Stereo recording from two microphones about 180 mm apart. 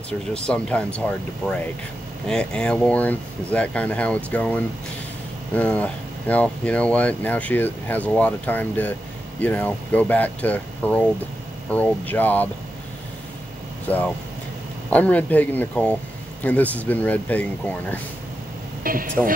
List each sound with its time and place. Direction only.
0.5 s speech: 5° left (ahead or behind)
13.8 s speech: 10° left (ahead or behind)
18.9 s speech: 50° right (ahead or behind)